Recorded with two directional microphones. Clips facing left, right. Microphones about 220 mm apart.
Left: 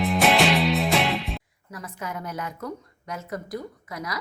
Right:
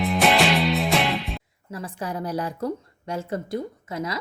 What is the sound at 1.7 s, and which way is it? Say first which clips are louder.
A woman's voice: right 4 dB; 30° right (ahead or behind).